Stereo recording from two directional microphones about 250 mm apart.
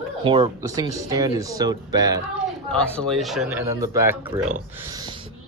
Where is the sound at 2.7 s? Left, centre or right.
Centre.